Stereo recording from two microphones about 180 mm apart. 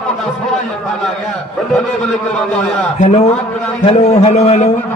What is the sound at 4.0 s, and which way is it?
Speech, 40° left (ahead or behind).